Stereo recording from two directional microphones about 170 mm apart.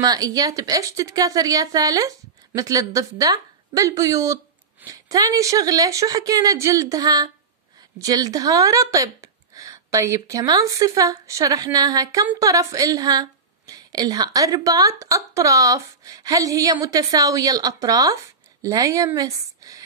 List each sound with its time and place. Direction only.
0.0 s a woman's voice: 20° right (ahead or behind)